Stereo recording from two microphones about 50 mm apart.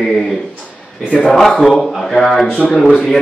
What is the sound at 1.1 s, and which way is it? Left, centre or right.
Speech, left.